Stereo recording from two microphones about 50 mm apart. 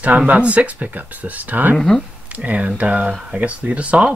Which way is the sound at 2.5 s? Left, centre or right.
Right.